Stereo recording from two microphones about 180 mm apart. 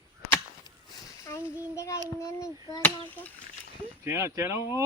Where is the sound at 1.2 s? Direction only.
15° left (ahead or behind).